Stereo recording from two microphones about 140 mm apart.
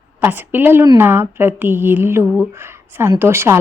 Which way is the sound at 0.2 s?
15° right (ahead or behind).